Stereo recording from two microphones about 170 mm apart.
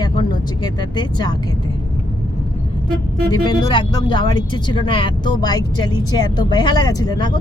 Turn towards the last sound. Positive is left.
turn(degrees=25)  # may be behind; listen again after turning